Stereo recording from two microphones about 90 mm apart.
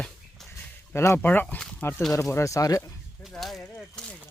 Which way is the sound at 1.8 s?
25° left (ahead or behind).